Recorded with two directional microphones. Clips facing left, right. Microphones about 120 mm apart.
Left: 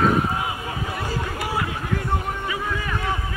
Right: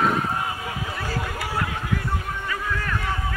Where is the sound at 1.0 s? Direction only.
15° left (ahead or behind).